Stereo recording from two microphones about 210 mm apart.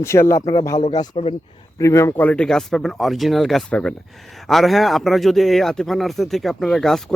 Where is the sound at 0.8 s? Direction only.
30° left (ahead or behind).